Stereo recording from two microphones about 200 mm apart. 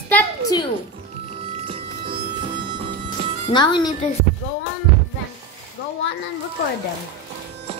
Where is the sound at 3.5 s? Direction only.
20° left (ahead or behind).